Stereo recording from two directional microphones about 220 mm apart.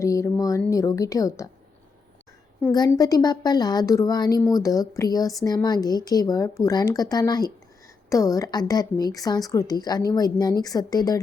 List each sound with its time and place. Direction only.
0.0 s a sound: 15° left (ahead or behind)
0.7 s a woman's voice: 15° left (ahead or behind)
2.6 s a woman's voice: 10° left (ahead or behind)